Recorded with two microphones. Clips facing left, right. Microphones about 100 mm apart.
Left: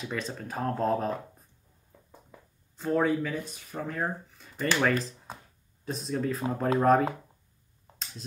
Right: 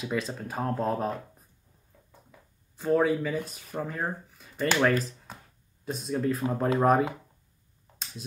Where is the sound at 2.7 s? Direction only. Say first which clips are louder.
Right 2 dB; 5° right (ahead or behind).